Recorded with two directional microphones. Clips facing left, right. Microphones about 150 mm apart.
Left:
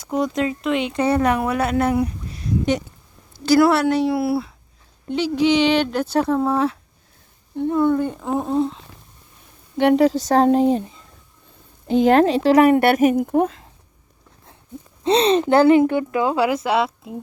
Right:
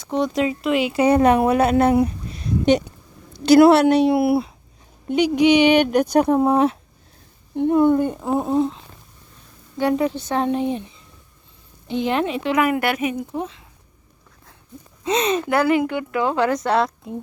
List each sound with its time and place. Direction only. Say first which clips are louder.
0.1 s speech: right 1 dB; centre (ahead or behind)
1.0 s a woman's voice: right 4 dB; 20° right (ahead or behind); by 8.8 s 5° right (ahead or behind)
10.1 s speech: left 6 dB; 40° left (ahead or behind)
15.0 s speech: left 4 dB; 30° left (ahead or behind)
16.2 s speech: right 3 dB; 10° left (ahead or behind)